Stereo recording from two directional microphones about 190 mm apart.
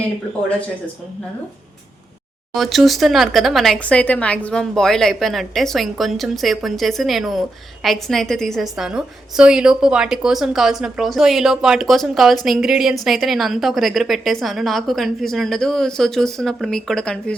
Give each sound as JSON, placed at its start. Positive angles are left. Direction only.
{"t": 2.6, "sound": "speech", "side_deg": 0}